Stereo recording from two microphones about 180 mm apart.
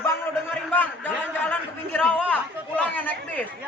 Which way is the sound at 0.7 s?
10° left (ahead or behind).